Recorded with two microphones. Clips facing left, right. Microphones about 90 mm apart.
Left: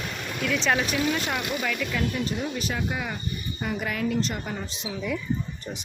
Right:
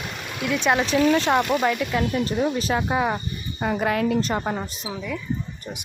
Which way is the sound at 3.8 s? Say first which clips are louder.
Right 5 dB; 60° right (ahead or behind).